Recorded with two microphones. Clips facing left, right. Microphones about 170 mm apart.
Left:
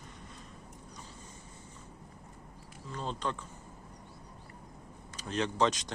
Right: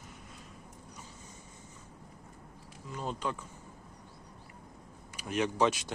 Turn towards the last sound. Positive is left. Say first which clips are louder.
# right 1 dB
turn(degrees=-10)  # may be behind; listen again after turning